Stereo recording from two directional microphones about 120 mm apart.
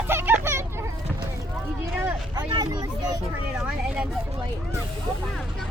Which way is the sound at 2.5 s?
35° right (ahead or behind).